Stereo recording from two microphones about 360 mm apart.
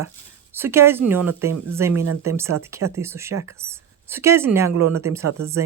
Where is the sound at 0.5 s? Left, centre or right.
Centre.